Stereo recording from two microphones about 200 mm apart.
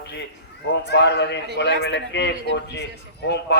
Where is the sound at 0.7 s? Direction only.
55° left (ahead or behind).